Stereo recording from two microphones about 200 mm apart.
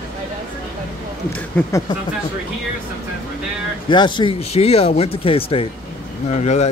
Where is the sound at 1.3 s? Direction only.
10° left (ahead or behind).